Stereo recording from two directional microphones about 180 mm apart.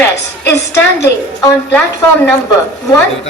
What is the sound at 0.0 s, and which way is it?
Speech, 15° left (ahead or behind).